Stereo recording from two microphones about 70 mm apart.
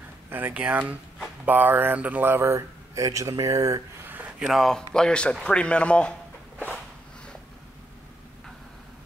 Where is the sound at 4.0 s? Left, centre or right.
Right.